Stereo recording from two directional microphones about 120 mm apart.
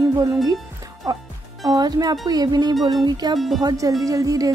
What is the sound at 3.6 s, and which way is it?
Speech, 30° right (ahead or behind).